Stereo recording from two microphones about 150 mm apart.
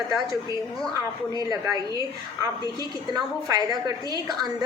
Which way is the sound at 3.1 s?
25° right (ahead or behind).